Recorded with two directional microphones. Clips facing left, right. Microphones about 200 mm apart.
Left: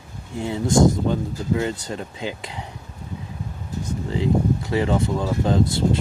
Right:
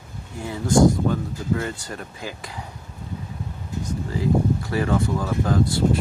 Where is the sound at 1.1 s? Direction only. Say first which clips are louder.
Left 2 dB; 20° left (ahead or behind).